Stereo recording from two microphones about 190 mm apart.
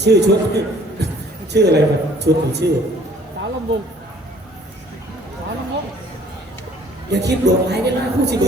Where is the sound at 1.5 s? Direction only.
60° right (ahead or behind).